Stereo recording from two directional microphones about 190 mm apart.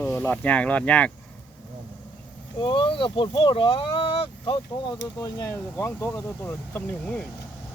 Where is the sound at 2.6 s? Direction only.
25° left (ahead or behind); by 7.2 s 10° left (ahead or behind).